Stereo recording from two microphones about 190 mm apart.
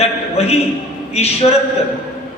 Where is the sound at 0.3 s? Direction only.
35° left (ahead or behind).